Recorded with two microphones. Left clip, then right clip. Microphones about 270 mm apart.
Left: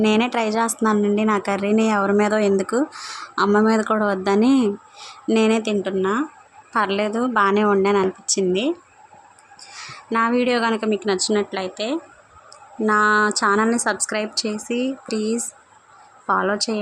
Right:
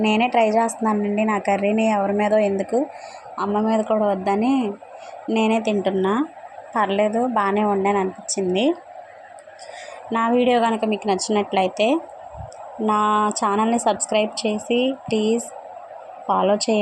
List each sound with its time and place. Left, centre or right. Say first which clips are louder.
0.0 s speech: right 2 dB; centre
10.1 s speech: right 1 dB; centre
13.0 s a sound: left 2 dB; left
13.2 s speech: left 2 dB; centre